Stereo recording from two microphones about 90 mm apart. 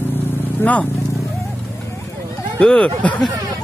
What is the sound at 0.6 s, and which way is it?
Speech, 15° left (ahead or behind).